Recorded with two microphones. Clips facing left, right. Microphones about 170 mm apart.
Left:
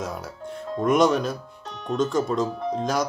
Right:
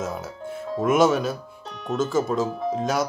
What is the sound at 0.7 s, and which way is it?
Speech, 5° right (ahead or behind).